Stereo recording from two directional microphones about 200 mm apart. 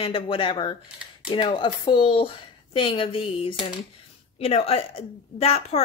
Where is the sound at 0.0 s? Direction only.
25° left (ahead or behind).